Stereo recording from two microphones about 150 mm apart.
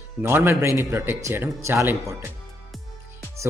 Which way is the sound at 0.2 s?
15° right (ahead or behind).